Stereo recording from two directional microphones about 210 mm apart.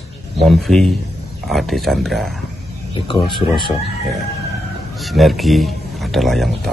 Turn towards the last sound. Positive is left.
turn(degrees=0)  # may be behind; listen again after turning